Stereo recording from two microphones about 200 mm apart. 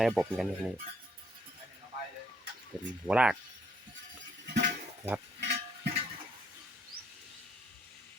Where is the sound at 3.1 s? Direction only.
5° right (ahead or behind).